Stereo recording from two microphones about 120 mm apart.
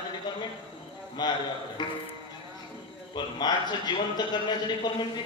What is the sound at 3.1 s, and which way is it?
Mantra, 35° left (ahead or behind).